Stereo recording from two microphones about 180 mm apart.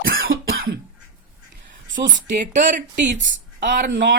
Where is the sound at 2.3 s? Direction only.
45° right (ahead or behind).